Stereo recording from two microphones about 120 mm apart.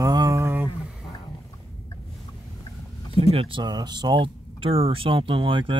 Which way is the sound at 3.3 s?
55° right (ahead or behind).